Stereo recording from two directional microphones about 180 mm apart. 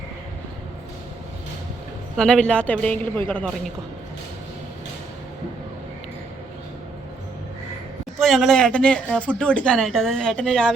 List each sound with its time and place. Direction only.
2.1 s a woman's voice: 5° left (ahead or behind)
8.2 s speech: centre (ahead or behind)